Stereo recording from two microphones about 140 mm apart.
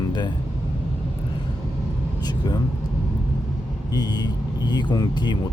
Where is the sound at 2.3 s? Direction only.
30° left (ahead or behind).